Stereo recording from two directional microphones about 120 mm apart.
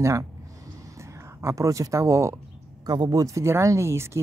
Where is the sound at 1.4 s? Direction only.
25° right (ahead or behind).